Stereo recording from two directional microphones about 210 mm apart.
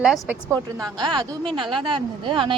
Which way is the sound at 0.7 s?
20° right (ahead or behind).